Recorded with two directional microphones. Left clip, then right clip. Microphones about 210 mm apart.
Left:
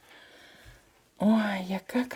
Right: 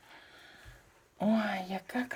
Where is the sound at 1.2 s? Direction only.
45° left (ahead or behind).